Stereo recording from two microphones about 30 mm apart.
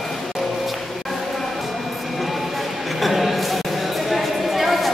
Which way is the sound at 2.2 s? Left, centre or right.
Centre.